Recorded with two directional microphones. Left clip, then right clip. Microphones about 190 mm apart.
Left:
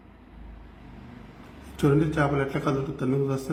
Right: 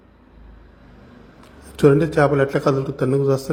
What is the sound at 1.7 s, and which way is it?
Speech, 35° right (ahead or behind).